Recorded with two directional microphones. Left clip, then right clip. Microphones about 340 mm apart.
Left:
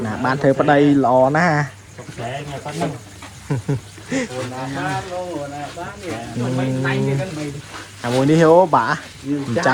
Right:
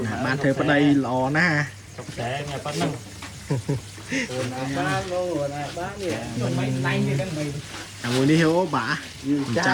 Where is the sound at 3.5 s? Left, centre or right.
Left.